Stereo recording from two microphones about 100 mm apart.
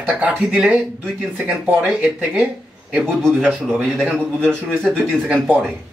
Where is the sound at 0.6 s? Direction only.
15° right (ahead or behind).